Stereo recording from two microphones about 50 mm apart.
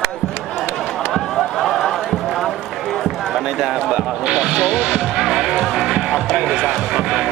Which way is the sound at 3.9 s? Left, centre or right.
Centre.